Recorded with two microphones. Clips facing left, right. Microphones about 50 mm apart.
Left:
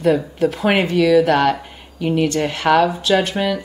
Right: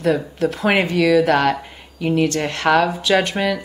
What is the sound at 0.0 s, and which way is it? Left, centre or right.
A woman's voice, centre.